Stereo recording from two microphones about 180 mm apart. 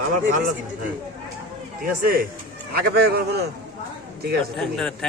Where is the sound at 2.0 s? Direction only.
55° right (ahead or behind).